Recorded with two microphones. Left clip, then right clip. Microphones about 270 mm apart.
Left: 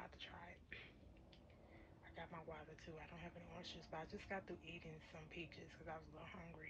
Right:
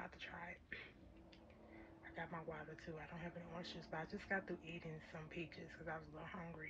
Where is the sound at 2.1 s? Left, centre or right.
Centre.